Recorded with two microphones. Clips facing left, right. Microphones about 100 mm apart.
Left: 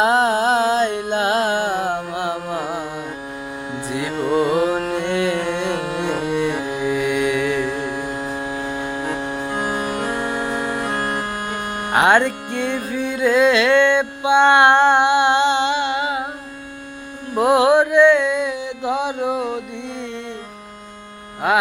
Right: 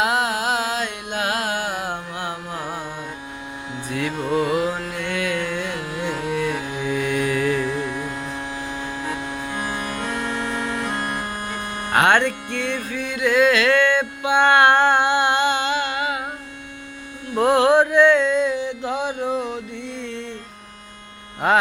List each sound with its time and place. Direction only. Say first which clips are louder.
0.0 s music: left 5 dB; 30° left (ahead or behind)
2.3 s carnatic music: left 5 dB; 25° left (ahead or behind)
3.8 s music: left 2 dB; 20° left (ahead or behind)
4.9 s carnatic music: left 5 dB; 25° left (ahead or behind)
6.2 s music: left 3 dB; 20° left (ahead or behind); by 7.6 s centre (ahead or behind)
10.6 s music: left 2 dB; 15° left (ahead or behind)
10.9 s music: left 3 dB; 90° left
11.9 s music: left 2 dB; 15° left (ahead or behind)
17.3 s mantra: left 1 dB; 15° left (ahead or behind)
21.4 s music: even; 5° left (ahead or behind)